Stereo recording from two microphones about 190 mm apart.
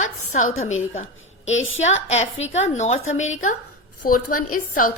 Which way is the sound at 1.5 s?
90° left.